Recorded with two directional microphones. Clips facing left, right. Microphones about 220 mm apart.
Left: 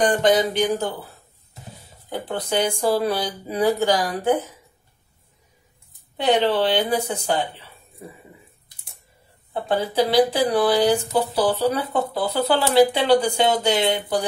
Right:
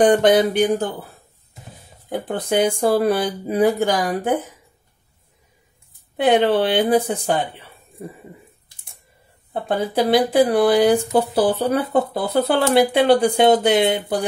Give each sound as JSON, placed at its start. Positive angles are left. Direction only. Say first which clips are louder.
{"t": 0.0, "sound": "speech", "louder": "right 4 dB", "side_deg": -60}
{"t": 2.0, "sound": "speech", "louder": "right 4 dB", "side_deg": -50}
{"t": 6.1, "sound": "speech", "louder": "right 3 dB", "side_deg": -55}
{"t": 9.5, "sound": "speech", "louder": "right 1 dB", "side_deg": -50}